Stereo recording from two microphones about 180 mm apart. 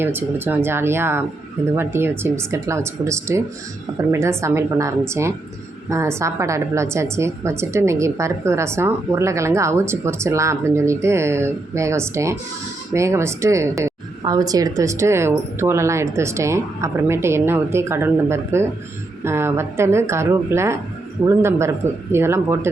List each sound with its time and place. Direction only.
0.0 s a woman's voice: 10° right (ahead or behind)